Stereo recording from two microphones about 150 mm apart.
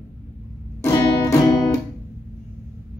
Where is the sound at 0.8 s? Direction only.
20° left (ahead or behind).